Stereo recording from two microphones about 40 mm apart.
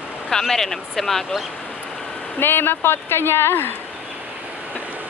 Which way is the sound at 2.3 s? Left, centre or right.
Left.